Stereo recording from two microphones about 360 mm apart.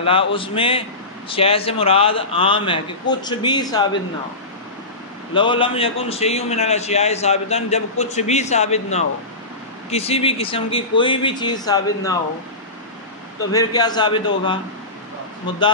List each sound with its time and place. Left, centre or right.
0.0 s a man's voice: centre
5.3 s a man's voice: centre
13.5 s a man's voice: centre